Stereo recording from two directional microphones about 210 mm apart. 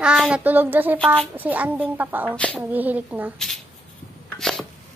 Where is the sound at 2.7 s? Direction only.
10° right (ahead or behind).